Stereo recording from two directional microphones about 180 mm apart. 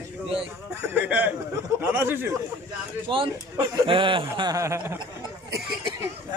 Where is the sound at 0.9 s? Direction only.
10° right (ahead or behind).